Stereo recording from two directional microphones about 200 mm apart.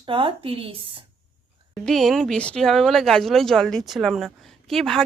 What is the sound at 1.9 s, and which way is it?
A woman's voice, centre (ahead or behind).